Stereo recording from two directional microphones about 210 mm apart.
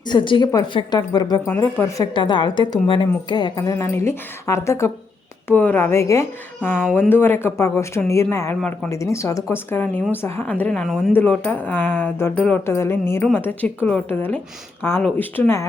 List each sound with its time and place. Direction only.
0.1 s a woman's voice: 25° left (ahead or behind)
2.1 s a woman's voice: 25° left (ahead or behind)